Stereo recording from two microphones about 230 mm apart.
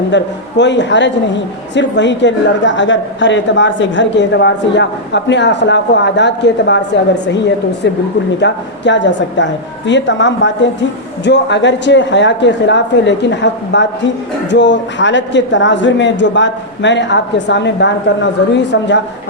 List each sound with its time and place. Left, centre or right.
0.1 s a woman's voice: left
8.4 s a woman's voice: left